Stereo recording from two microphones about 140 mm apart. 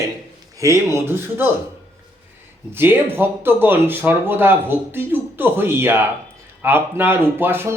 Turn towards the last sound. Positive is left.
turn(degrees=-15)  # may be behind; listen again after turning